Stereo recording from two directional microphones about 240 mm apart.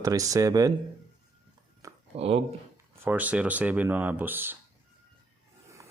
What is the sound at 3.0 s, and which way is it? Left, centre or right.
Speech, centre.